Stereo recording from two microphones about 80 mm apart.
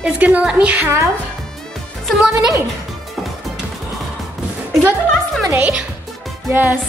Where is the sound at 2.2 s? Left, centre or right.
Centre.